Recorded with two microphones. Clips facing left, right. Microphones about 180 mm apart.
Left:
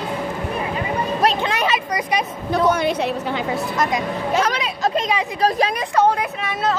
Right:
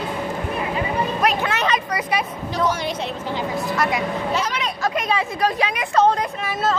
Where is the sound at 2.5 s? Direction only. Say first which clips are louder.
Left 6 dB; 55° left (ahead or behind).